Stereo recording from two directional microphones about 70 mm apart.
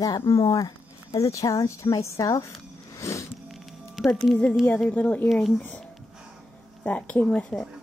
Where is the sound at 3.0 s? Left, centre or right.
Left.